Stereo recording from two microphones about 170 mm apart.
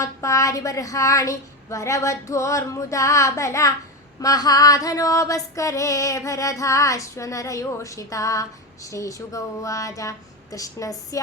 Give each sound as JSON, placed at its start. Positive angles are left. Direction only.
{"t": 0.0, "sound": "female singing", "side_deg": 20}